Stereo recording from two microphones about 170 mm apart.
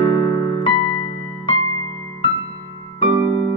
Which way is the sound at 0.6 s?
30° left (ahead or behind).